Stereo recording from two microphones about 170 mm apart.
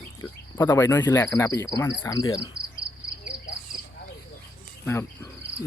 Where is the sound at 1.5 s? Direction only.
20° left (ahead or behind).